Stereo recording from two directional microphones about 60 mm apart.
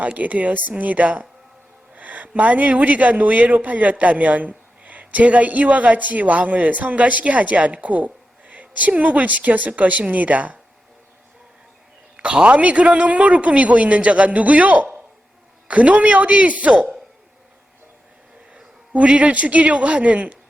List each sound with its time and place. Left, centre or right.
0.0 s a man's voice: right
12.1 s a man's voice: centre
18.5 s a man's voice: centre